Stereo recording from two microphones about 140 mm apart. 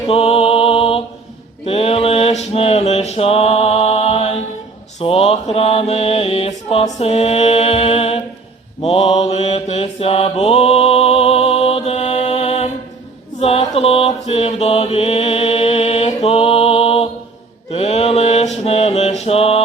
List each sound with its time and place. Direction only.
0.1 s music: 45° left (ahead or behind)
1.6 s mantra: 45° left (ahead or behind)